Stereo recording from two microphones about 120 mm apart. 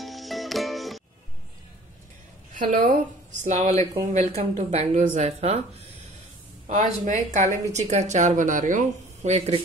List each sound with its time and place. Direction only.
0.0 s music: centre (ahead or behind)
2.5 s a woman's voice: 90° right
4.1 s speech: 70° right (ahead or behind)
6.7 s speech: 85° right